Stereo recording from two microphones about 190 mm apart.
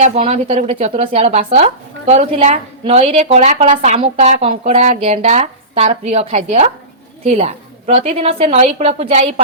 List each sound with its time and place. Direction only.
0.0 s speech: 35° right (ahead or behind)